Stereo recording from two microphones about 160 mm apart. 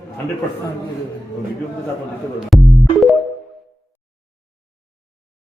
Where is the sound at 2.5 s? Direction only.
Centre (ahead or behind).